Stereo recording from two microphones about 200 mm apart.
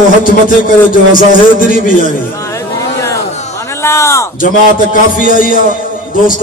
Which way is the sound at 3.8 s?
15° left (ahead or behind).